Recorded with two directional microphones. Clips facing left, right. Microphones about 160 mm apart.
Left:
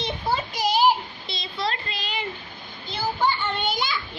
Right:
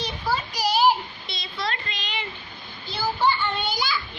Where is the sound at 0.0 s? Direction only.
25° left (ahead or behind); by 2.2 s 40° left (ahead or behind).